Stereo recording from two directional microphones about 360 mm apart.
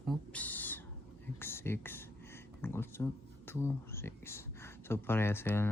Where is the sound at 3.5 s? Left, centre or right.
Centre.